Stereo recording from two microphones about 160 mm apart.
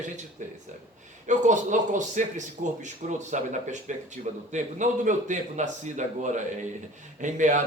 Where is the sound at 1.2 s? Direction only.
50° right (ahead or behind).